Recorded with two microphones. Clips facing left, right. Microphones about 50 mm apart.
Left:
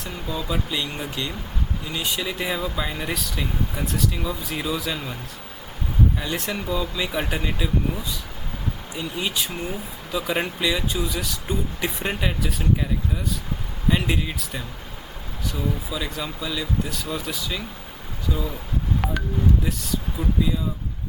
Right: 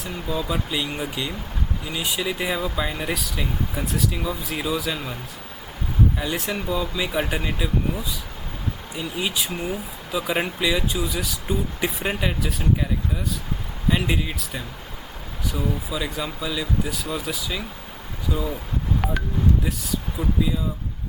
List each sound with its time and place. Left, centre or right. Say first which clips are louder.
0.0 s speech: right 2 dB; centre
6.1 s speech: right 1 dB; centre
19.0 s a sound: right 1 dB; centre
19.6 s speech: even; centre